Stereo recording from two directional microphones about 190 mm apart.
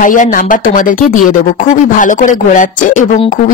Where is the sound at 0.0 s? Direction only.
45° left (ahead or behind).